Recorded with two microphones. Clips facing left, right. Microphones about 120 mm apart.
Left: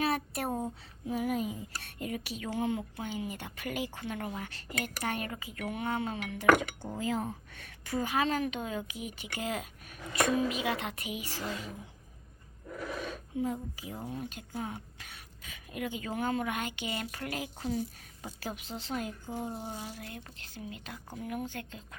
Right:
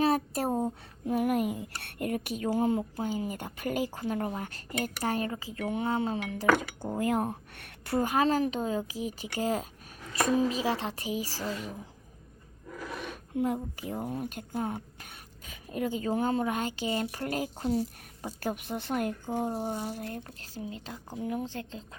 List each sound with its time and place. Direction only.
0.0 s a sound: 35° right (ahead or behind)
1.0 s speech: 60° right (ahead or behind)
7.9 s speech: 45° right (ahead or behind)
13.0 s a woman's voice: 65° right (ahead or behind); by 18.3 s 35° right (ahead or behind)
18.3 s speech: 55° right (ahead or behind); by 21.8 s 30° right (ahead or behind)